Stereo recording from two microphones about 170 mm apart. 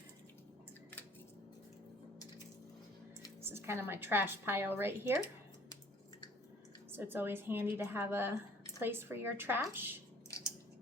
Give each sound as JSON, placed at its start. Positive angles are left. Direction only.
{"t": 3.4, "sound": "a woman's voice", "side_deg": -15}
{"t": 6.9, "sound": "a woman's voice", "side_deg": -10}
{"t": 10.2, "sound": "a sound", "side_deg": 20}